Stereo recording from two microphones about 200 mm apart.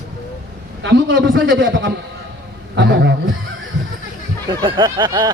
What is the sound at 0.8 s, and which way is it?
A man's voice, 70° right (ahead or behind).